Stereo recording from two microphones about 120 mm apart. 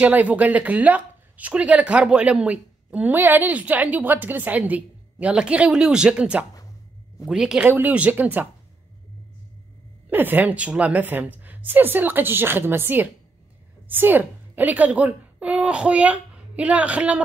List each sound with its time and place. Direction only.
0.0 s a man's voice: 10° right (ahead or behind)
10.0 s a woman's voice: 15° right (ahead or behind)